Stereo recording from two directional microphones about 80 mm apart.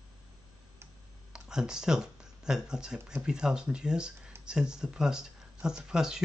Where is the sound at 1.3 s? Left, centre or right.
Centre.